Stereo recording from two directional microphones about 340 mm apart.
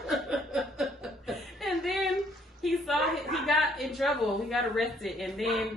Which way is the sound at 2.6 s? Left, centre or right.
Centre.